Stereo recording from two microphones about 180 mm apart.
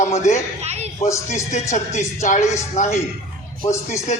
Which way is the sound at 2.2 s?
45° left (ahead or behind).